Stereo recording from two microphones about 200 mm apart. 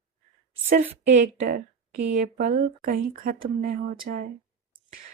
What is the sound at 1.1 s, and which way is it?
Speech, 40° right (ahead or behind).